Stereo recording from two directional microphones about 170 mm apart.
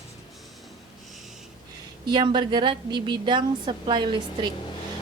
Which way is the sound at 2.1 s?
30° right (ahead or behind).